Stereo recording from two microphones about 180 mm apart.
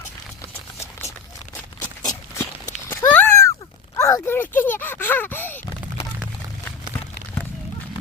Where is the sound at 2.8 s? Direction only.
10° left (ahead or behind).